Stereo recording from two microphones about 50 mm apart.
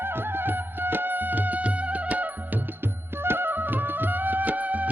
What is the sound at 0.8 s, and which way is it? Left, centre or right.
Music, right.